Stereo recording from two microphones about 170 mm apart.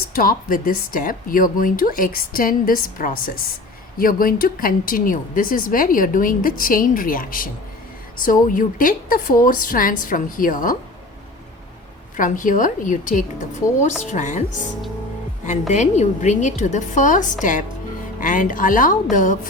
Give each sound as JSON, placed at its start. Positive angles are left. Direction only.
{"t": 0.1, "sound": "a woman's voice", "side_deg": 55}
{"t": 12.1, "sound": "a woman's voice", "side_deg": 50}
{"t": 15.7, "sound": "a woman's voice", "side_deg": 45}